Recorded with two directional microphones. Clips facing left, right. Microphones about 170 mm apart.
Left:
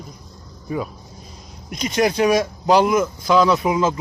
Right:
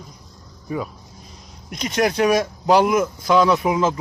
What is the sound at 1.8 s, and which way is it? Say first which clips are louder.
Speech: left 1 dB; centre (ahead or behind).